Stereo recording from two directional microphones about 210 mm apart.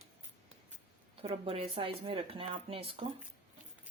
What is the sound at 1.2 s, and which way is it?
Speech, 30° right (ahead or behind).